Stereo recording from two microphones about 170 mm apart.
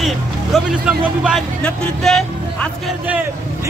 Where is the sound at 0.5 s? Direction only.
5° right (ahead or behind).